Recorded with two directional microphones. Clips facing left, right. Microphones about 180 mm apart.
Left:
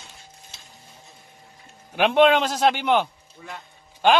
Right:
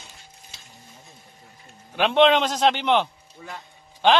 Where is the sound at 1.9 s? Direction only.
10° left (ahead or behind).